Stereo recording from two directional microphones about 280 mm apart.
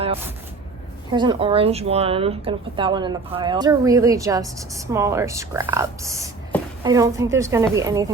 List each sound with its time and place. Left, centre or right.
1.1 s speech: centre